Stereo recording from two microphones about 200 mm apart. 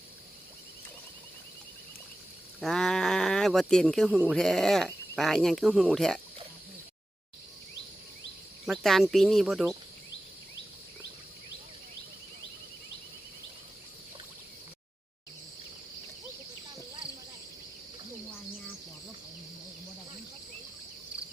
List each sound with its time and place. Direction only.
2.6 s speech: centre (ahead or behind)
8.6 s speech: centre (ahead or behind)